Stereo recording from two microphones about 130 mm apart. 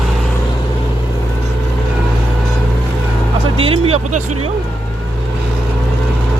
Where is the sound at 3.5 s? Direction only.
45° right (ahead or behind).